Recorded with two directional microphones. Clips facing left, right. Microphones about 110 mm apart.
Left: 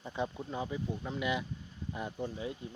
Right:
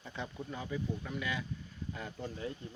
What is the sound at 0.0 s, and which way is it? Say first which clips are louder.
Speech: left 5 dB; 20° left (ahead or behind).